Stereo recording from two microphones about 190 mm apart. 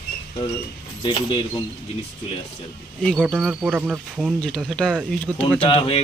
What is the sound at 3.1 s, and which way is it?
Speech, 5° right (ahead or behind).